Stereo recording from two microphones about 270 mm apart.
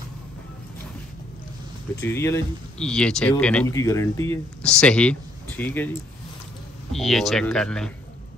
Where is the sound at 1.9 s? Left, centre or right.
Centre.